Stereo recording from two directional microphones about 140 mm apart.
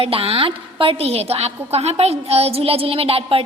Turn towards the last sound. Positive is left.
turn(degrees=-45)  # may be behind; listen again after turning